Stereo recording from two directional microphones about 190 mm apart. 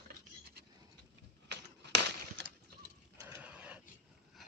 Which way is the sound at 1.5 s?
65° right (ahead or behind).